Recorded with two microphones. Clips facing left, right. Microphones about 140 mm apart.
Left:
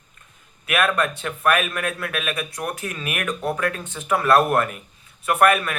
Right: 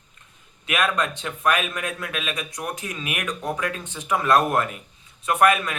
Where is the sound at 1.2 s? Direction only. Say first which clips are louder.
Left 2 dB; 55° left (ahead or behind).